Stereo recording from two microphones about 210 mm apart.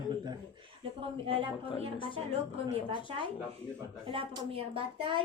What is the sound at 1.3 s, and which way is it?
Speech, 30° right (ahead or behind).